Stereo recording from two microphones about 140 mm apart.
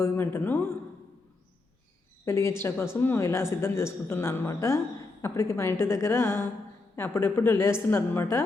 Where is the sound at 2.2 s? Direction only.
20° left (ahead or behind).